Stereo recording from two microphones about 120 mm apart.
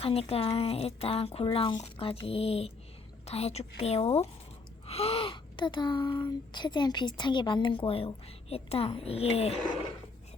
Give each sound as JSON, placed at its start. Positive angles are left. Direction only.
{"t": 0.0, "sound": "a woman's voice", "side_deg": 55}
{"t": 4.9, "sound": "gasp", "side_deg": 55}
{"t": 6.5, "sound": "a woman's voice", "side_deg": 35}